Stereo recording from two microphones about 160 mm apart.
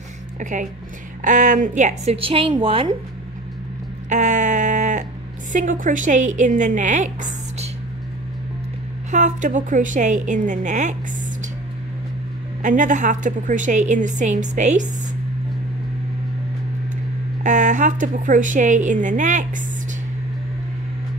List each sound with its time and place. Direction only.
0.4 s a woman's voice: 50° right (ahead or behind)
2.1 s a woman's voice: 35° right (ahead or behind)
4.1 s bleat: 50° right (ahead or behind)
5.5 s a woman's voice: 50° right (ahead or behind)
9.1 s a woman's voice: 50° right (ahead or behind)
12.6 s a woman's voice: 50° right (ahead or behind)
17.4 s a woman's voice: 50° right (ahead or behind)